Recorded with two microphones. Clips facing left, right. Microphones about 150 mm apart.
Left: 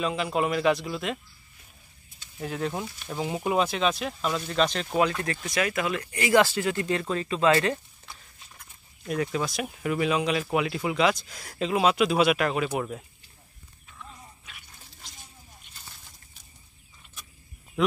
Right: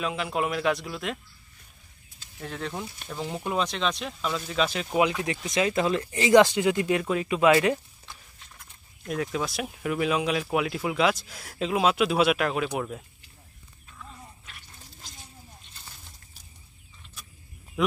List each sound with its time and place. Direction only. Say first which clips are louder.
0.0 s speech: left 2 dB; centre (ahead or behind)
2.4 s speech: left 4 dB; 5° left (ahead or behind); by 7.8 s 10° right (ahead or behind)
9.0 s speech: left 1 dB; centre (ahead or behind)
17.8 s speech: left 1 dB; 5° right (ahead or behind)